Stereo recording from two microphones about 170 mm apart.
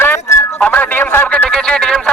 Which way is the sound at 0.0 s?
15° left (ahead or behind).